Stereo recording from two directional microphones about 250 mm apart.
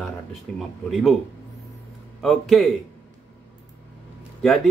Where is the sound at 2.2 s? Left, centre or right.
Centre.